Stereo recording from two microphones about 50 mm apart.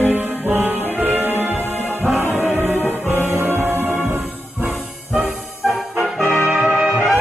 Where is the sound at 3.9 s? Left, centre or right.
Right.